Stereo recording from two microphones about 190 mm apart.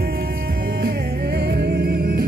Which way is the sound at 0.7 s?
55° right (ahead or behind).